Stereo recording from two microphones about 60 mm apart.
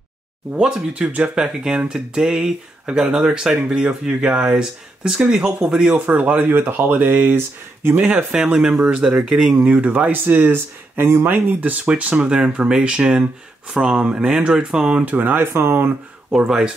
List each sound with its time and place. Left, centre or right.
0.9 s speech: right
6.0 s speech: right
8.5 s speech: centre; by 11.3 s right
11.3 s speech: right
15.0 s speech: right
16.3 s speech: centre